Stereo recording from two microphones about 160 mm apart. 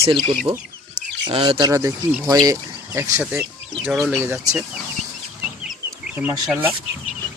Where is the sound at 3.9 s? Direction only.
Centre (ahead or behind).